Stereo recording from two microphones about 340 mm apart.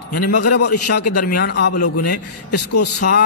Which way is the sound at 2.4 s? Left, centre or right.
Left.